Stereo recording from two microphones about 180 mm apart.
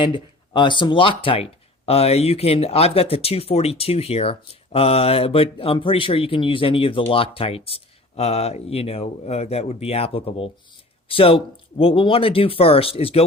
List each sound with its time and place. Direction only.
0.0 s speech: 25° left (ahead or behind)